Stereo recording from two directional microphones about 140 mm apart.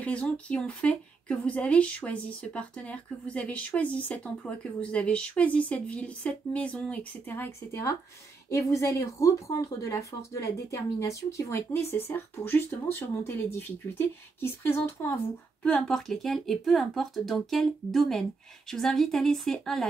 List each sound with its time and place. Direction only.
0.0 s a woman's voice: 10° left (ahead or behind)
15.6 s speech: 5° left (ahead or behind)